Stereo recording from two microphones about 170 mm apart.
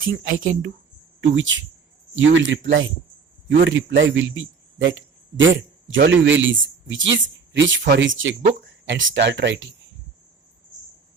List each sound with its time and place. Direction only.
0.0 s speech: 55° right (ahead or behind)
1.4 s a man's voice: 90° right